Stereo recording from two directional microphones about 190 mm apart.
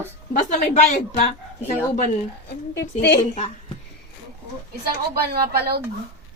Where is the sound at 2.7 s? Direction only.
60° left (ahead or behind).